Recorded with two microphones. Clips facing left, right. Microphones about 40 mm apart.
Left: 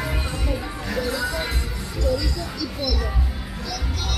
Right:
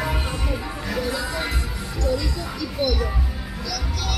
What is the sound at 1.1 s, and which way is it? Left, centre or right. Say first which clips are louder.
Music: left 1 dB; centre.